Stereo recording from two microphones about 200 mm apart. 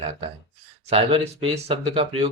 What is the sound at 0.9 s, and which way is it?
Speech, 30° right (ahead or behind).